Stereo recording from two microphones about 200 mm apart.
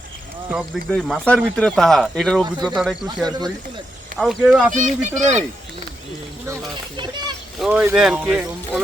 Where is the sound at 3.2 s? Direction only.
20° right (ahead or behind).